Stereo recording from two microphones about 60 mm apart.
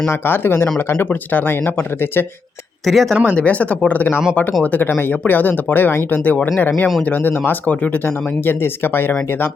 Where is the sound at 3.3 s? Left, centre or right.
Left.